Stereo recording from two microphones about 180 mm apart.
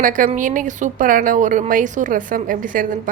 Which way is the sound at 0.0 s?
45° right (ahead or behind).